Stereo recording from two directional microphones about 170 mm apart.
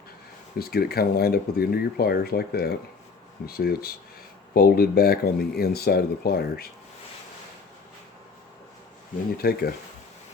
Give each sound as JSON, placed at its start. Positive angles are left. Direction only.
{"t": 0.7, "sound": "speech", "side_deg": 65}
{"t": 9.4, "sound": "speech", "side_deg": 65}